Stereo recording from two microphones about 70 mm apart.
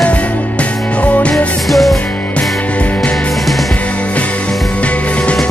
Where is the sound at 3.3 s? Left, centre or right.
Centre.